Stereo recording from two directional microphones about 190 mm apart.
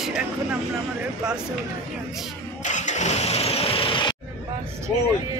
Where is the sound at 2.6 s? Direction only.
40° left (ahead or behind).